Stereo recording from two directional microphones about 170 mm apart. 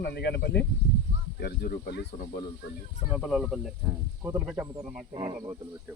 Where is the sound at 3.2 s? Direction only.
Centre (ahead or behind).